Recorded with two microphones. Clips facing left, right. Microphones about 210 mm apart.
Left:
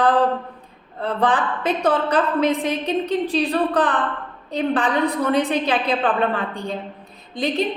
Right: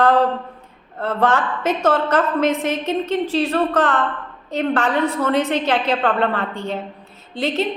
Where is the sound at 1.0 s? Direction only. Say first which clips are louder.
Right 2 dB; 15° left (ahead or behind).